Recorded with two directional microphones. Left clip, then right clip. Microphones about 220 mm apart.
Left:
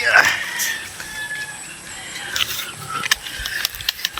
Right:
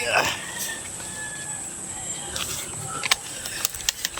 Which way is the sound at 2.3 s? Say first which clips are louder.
Left 10 dB; 5° right (ahead or behind).